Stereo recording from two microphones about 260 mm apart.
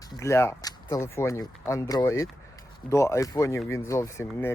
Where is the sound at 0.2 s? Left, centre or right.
Centre.